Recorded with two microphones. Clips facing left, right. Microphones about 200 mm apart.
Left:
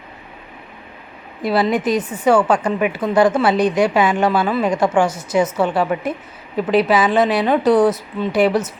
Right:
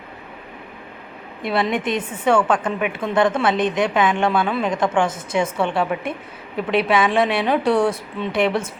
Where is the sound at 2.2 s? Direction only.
5° left (ahead or behind).